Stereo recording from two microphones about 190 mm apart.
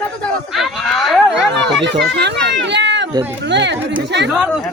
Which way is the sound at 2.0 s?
65° right (ahead or behind).